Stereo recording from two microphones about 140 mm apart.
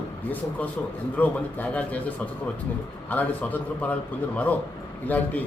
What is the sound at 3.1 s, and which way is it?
Speech, 10° left (ahead or behind).